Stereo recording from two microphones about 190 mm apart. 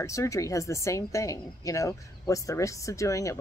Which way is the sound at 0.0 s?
15° left (ahead or behind).